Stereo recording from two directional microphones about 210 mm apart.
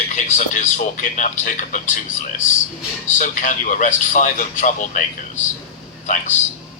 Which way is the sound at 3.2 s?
35° left (ahead or behind).